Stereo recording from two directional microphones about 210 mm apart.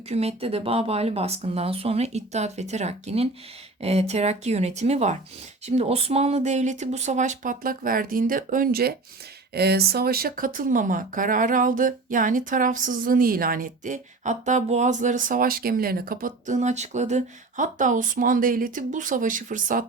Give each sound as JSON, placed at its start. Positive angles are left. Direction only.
{"t": 0.1, "sound": "speech", "side_deg": -30}